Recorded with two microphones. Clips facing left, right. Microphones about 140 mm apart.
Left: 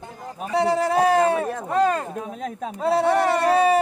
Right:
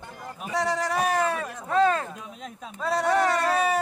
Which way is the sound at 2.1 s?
50° left (ahead or behind).